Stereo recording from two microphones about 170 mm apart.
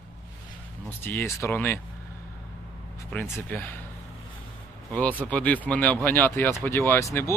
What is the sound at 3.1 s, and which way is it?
Speech, 10° left (ahead or behind).